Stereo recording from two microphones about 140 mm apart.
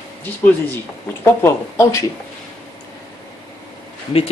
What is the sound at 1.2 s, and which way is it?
Speech, 15° left (ahead or behind).